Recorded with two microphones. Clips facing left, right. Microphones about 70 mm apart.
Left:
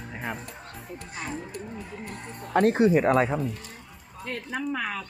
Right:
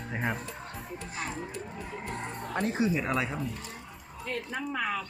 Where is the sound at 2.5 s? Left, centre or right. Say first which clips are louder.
Left 9 dB; left.